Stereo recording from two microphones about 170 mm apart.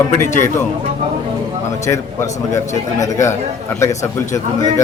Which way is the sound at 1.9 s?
15° left (ahead or behind).